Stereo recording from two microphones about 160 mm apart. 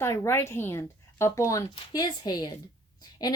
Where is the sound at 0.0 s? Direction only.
15° left (ahead or behind).